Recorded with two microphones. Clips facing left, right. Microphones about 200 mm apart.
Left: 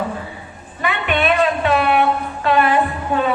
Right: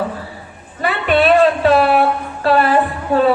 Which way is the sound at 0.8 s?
35° right (ahead or behind).